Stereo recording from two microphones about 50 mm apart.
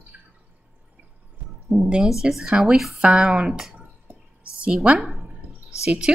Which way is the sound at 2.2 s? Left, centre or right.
Centre.